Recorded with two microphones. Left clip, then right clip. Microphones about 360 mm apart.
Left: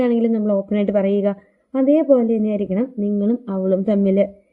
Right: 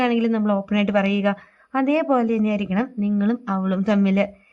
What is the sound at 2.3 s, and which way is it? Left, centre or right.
Speech, centre.